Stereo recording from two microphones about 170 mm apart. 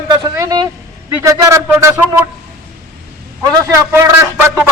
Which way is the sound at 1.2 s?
15° right (ahead or behind).